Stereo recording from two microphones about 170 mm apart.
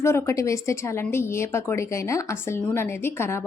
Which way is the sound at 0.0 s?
15° left (ahead or behind).